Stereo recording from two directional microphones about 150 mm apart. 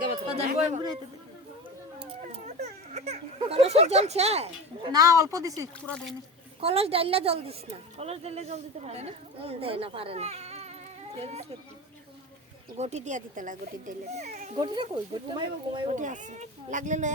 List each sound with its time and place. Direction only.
0.3 s speech: 45° right (ahead or behind)
2.3 s a sound: 45° right (ahead or behind)
4.9 s speech: 25° right (ahead or behind)
5.8 s speech: 5° left (ahead or behind)
6.6 s a woman's voice: 40° right (ahead or behind)
12.7 s speech: 50° right (ahead or behind)
15.3 s a woman's voice: 30° right (ahead or behind)
15.9 s speech: 55° right (ahead or behind)